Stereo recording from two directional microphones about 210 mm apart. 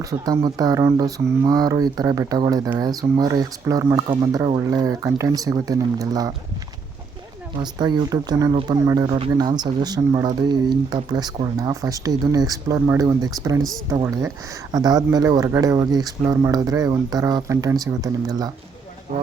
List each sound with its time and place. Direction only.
0.0 s speech: 15° right (ahead or behind)
7.6 s speech: 20° right (ahead or behind)
19.1 s speech: 40° right (ahead or behind)